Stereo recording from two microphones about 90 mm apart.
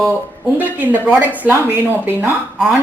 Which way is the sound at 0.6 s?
20° right (ahead or behind).